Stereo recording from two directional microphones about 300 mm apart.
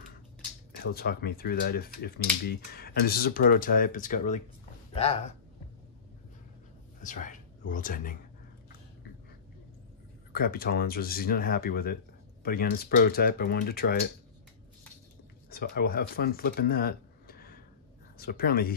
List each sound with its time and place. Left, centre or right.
0.9 s speech: left
7.0 s speech: left
10.3 s speech: left
15.5 s speech: left